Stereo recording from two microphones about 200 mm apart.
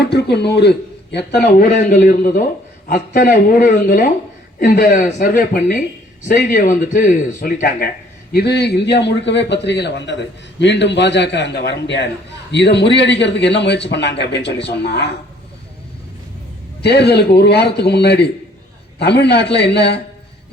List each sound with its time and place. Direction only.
0.0 s speech: 55° left (ahead or behind)
1.5 s speech: 40° left (ahead or behind)
16.8 s speech: 55° left (ahead or behind)